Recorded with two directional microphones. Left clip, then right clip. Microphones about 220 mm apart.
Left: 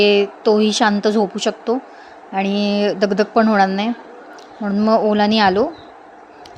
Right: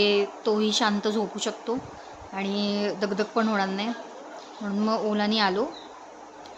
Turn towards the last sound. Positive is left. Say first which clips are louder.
# left 10 dB
turn(degrees=30)  # may be behind; listen again after turning